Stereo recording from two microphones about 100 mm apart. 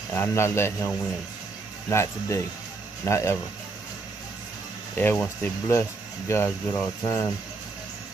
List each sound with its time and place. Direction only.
0.1 s speech: 25° left (ahead or behind)
4.9 s speech: 20° left (ahead or behind)
5.7 s speech: 30° left (ahead or behind)